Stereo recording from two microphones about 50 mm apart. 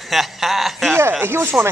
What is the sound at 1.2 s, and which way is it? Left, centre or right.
Speech, right.